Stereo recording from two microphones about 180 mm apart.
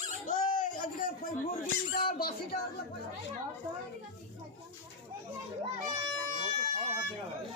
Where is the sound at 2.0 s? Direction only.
55° left (ahead or behind).